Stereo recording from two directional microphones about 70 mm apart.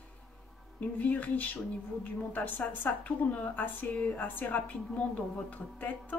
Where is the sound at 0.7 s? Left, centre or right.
Left.